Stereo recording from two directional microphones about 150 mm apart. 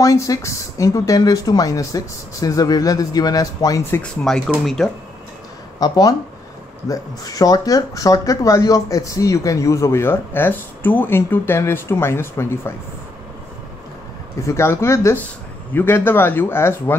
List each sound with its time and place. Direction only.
0.0 s speech: 20° left (ahead or behind)
4.6 s speech: 5° left (ahead or behind)
5.8 s speech: 25° left (ahead or behind)
14.4 s speech: 15° left (ahead or behind)